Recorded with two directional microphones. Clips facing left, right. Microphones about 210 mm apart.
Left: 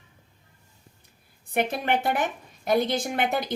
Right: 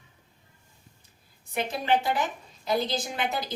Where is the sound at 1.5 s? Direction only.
55° left (ahead or behind).